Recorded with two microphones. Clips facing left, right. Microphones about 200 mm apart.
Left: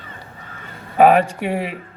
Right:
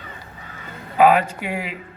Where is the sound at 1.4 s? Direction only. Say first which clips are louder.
Left 5 dB; 30° left (ahead or behind).